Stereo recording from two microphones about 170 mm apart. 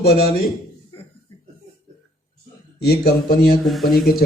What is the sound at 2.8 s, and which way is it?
Speech, 65° left (ahead or behind).